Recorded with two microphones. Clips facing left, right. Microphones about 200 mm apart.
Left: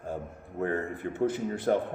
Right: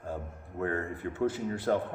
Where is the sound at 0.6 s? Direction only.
25° left (ahead or behind).